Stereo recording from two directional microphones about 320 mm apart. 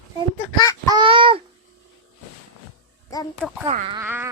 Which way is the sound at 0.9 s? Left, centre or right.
Centre.